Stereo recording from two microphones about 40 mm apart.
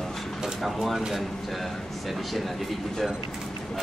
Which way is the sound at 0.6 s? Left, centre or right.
Centre.